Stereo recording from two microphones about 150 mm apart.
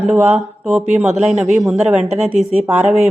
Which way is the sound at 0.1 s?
10° right (ahead or behind).